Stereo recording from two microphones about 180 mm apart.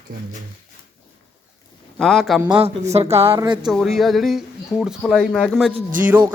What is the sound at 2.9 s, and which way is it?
Speech, 35° right (ahead or behind).